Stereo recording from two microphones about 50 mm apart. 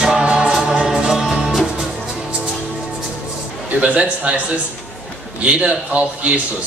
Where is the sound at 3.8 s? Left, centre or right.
Right.